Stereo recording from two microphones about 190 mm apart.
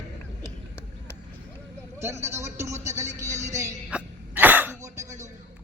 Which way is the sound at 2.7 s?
40° right (ahead or behind).